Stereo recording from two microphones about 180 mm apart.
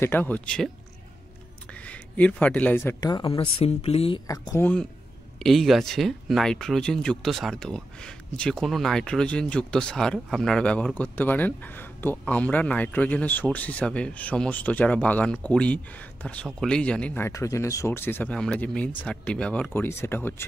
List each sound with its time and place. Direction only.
0.0 s speech: 10° left (ahead or behind)
1.7 s speech: 5° left (ahead or behind)
3.0 s speech: 25° left (ahead or behind)
4.3 s speech: 20° left (ahead or behind)
5.4 s speech: centre (ahead or behind)